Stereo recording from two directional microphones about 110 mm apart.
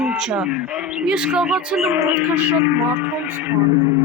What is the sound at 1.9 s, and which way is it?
Speech, 15° right (ahead or behind).